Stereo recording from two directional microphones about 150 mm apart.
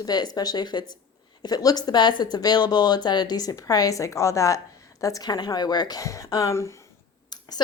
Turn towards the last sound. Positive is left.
turn(degrees=25)  # may be behind; listen again after turning